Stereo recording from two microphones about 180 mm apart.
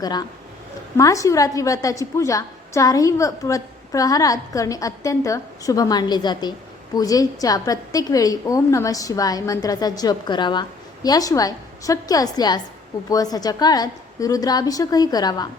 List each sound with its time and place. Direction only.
0.0 s a woman's voice: 20° left (ahead or behind)